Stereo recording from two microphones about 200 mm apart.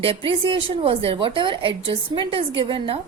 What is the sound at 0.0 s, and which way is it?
Speech, 25° right (ahead or behind).